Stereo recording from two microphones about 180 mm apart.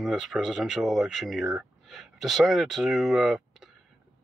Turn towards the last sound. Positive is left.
turn(degrees=0)  # may be behind; listen again after turning